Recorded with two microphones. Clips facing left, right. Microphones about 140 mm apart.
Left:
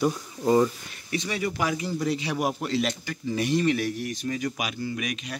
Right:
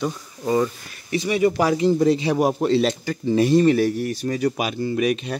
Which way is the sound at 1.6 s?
35° right (ahead or behind).